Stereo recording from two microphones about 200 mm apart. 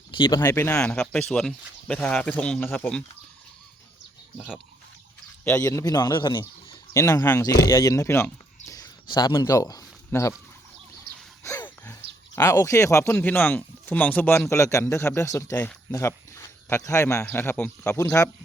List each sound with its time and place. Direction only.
0.1 s speech: 20° left (ahead or behind)
4.4 s speech: 5° right (ahead or behind)
5.5 s a man's voice: 15° left (ahead or behind)
11.4 s a sound: 15° left (ahead or behind)
12.4 s speech: 15° left (ahead or behind)